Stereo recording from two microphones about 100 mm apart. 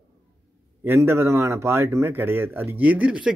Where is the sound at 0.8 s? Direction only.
25° right (ahead or behind).